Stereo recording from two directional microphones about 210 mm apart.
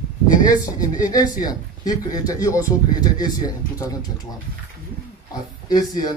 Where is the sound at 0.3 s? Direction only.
40° left (ahead or behind).